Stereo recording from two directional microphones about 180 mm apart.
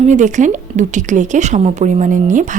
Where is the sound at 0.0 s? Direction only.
40° right (ahead or behind).